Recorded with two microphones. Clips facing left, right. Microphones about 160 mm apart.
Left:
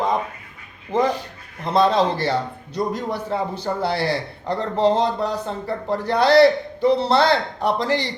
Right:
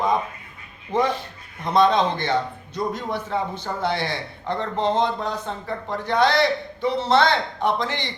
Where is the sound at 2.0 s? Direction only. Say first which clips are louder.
Left 2 dB; 35° left (ahead or behind).